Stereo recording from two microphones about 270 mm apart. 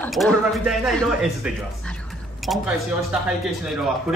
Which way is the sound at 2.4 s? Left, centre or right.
Centre.